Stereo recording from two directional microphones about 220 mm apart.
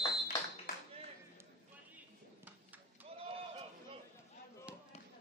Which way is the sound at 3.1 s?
25° right (ahead or behind).